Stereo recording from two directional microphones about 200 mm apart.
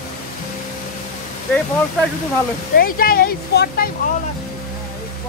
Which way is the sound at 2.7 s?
45° left (ahead or behind).